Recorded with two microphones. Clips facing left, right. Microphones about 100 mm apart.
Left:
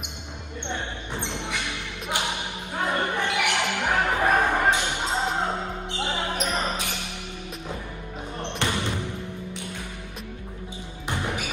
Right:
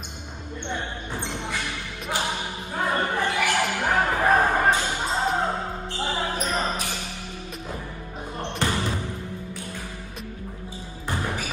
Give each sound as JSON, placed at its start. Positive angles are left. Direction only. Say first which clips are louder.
{"t": 0.8, "sound": "a sound", "louder": "right 1 dB", "side_deg": 20}
{"t": 4.0, "sound": "music", "louder": "right 2 dB", "side_deg": 20}
{"t": 5.9, "sound": "basketball bounce", "louder": "right 1 dB", "side_deg": 20}
{"t": 8.6, "sound": "basketball bounce", "louder": "right 1 dB", "side_deg": 20}
{"t": 11.1, "sound": "basketball bounce", "louder": "even", "side_deg": 20}